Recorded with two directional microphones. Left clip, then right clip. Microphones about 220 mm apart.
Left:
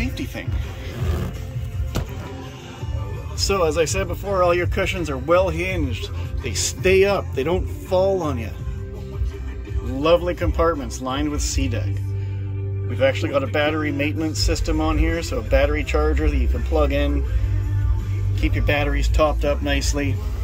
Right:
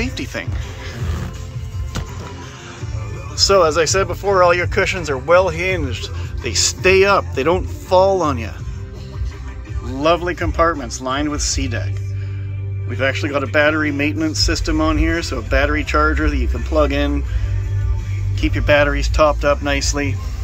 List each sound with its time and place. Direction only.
0.0 s music: 5° left (ahead or behind)
3.3 s speech: centre (ahead or behind)
10.0 s speech: 5° left (ahead or behind)
12.9 s speech: 5° left (ahead or behind)
18.4 s speech: 5° left (ahead or behind)